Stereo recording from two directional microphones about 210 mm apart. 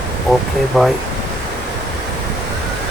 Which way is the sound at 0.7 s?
Centre (ahead or behind).